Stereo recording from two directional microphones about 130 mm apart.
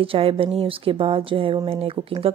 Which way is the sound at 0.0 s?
45° right (ahead or behind).